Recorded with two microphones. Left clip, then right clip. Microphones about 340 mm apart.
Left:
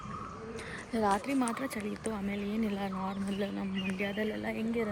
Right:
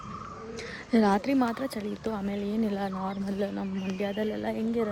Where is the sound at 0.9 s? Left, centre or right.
Right.